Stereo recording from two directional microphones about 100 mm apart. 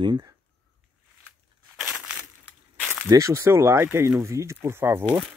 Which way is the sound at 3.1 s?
30° right (ahead or behind).